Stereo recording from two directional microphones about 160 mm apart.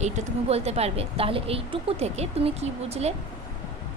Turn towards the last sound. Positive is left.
turn(degrees=-40)  # may be behind; listen again after turning